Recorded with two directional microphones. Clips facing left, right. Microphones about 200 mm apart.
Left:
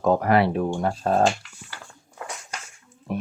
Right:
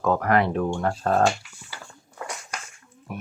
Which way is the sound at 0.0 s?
20° left (ahead or behind).